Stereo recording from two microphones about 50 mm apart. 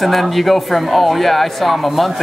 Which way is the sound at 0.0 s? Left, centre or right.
Centre.